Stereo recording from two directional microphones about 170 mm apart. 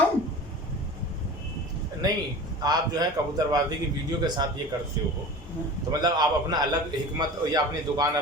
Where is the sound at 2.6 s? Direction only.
25° right (ahead or behind).